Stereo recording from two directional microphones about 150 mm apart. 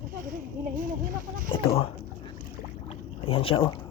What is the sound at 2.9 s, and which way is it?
Boat, 40° left (ahead or behind).